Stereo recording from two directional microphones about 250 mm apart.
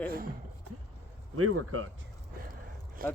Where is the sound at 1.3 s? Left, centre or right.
Right.